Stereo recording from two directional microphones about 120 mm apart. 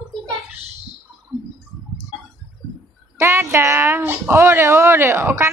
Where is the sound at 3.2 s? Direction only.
20° right (ahead or behind).